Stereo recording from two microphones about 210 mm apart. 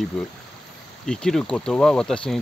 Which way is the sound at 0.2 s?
5° left (ahead or behind).